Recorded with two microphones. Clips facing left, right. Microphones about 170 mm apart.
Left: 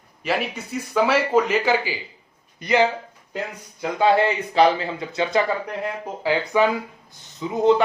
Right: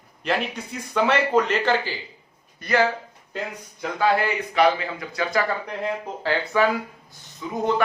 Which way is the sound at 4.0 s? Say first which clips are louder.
Left 3 dB; 25° left (ahead or behind).